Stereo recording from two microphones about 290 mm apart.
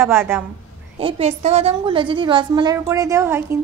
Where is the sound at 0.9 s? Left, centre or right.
Centre.